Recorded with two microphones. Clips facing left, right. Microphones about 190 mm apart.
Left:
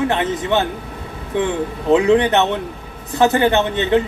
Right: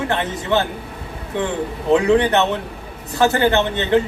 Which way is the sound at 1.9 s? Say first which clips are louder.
Left 1 dB; 20° left (ahead or behind).